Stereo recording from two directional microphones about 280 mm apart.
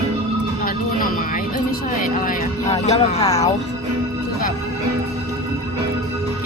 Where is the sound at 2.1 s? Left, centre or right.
Left.